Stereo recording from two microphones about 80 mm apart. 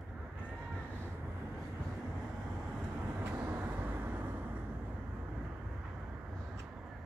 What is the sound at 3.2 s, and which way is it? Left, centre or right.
Vehicle, right.